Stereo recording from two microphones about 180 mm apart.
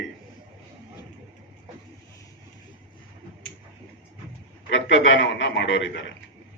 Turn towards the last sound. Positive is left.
turn(degrees=90)